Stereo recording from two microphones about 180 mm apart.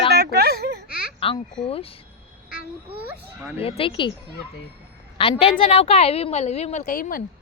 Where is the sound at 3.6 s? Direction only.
30° left (ahead or behind).